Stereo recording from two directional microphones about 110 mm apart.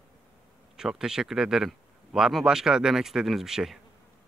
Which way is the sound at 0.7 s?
5° right (ahead or behind).